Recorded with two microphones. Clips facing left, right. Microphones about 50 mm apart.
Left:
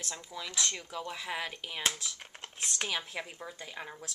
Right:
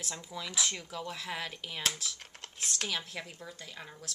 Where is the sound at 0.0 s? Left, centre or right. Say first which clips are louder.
Even; centre.